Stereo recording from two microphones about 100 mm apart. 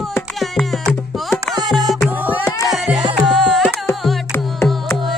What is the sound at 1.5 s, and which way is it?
Music, centre (ahead or behind).